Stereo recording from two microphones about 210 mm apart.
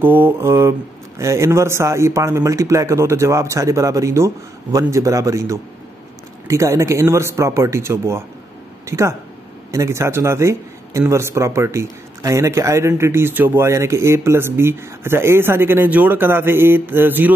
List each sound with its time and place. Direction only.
0.0 s a man's voice: 10° right (ahead or behind)